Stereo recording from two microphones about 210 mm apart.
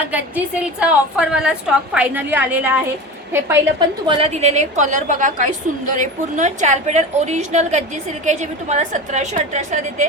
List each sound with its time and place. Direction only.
0.1 s a woman's voice: 5° right (ahead or behind); by 10.1 s 35° right (ahead or behind)